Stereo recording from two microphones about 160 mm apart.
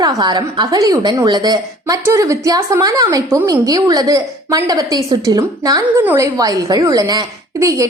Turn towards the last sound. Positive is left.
turn(degrees=-20)  # may be behind; listen again after turning